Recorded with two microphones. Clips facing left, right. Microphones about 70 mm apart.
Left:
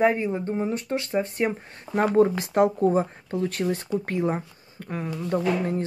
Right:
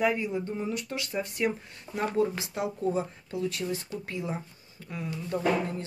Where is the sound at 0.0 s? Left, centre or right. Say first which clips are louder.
Left 5 dB; left.